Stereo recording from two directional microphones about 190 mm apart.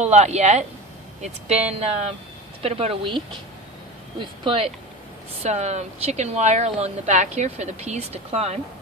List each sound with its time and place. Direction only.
0.0 s speech: 35° right (ahead or behind)
4.2 s speech: 25° right (ahead or behind)